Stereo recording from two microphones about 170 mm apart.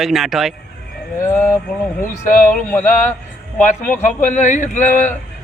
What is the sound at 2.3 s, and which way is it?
Speech, 50° left (ahead or behind).